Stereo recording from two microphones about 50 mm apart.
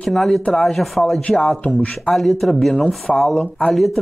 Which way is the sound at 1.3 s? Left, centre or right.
Centre.